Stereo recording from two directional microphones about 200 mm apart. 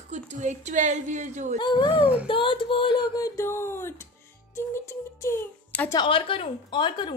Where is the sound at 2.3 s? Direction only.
25° left (ahead or behind).